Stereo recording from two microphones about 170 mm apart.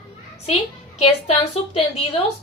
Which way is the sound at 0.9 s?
35° left (ahead or behind).